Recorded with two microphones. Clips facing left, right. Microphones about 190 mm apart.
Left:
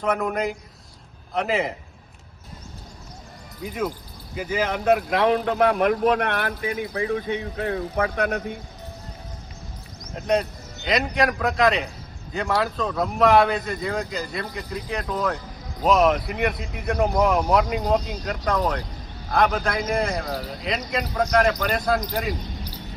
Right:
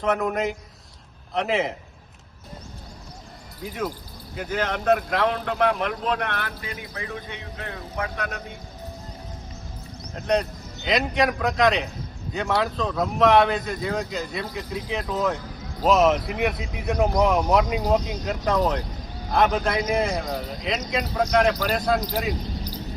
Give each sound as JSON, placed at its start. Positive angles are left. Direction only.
{"t": 0.0, "sound": "speech", "side_deg": 0}
{"t": 3.6, "sound": "speech", "side_deg": 0}
{"t": 5.5, "sound": "speech", "side_deg": 45}
{"t": 10.2, "sound": "speech", "side_deg": 5}